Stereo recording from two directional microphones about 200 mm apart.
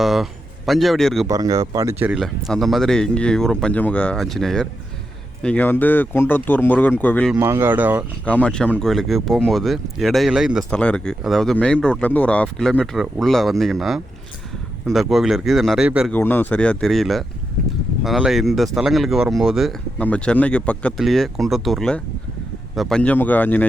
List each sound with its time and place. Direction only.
0.0 s a man's voice: centre (ahead or behind)
1.3 s speech: 20° right (ahead or behind)
2.1 s speech: centre (ahead or behind)
7.3 s speech: 10° right (ahead or behind)
8.2 s speech: 5° left (ahead or behind)
16.1 s speech: 10° left (ahead or behind)